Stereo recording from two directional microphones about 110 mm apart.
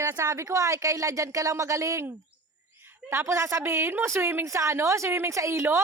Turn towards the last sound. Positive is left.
turn(degrees=-25)  # may be behind; listen again after turning